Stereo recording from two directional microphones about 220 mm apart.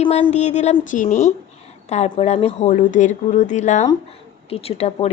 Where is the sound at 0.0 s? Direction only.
30° left (ahead or behind).